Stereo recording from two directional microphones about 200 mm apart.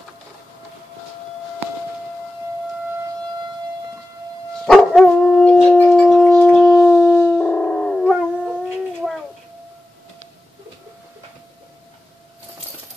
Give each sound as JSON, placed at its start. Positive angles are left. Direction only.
{"t": 4.6, "sound": "dog", "side_deg": 0}
{"t": 5.9, "sound": "shofar", "side_deg": 5}